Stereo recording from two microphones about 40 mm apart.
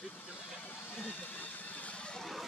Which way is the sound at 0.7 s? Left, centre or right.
Left.